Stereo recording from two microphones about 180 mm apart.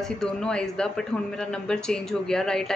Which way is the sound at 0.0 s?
5° left (ahead or behind).